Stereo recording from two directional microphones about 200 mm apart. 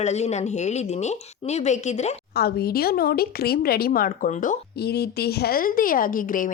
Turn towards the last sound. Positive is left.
turn(degrees=45)  # may be behind; listen again after turning